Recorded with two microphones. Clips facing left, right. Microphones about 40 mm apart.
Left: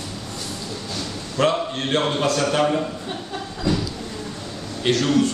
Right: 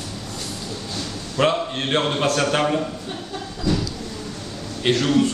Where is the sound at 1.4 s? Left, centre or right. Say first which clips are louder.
Even; right.